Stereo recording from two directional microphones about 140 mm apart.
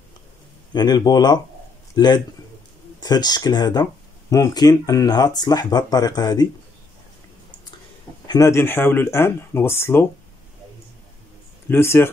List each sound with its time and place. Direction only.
0.7 s speech: 30° left (ahead or behind)
8.3 s speech: 20° left (ahead or behind)
11.7 s speech: 15° left (ahead or behind)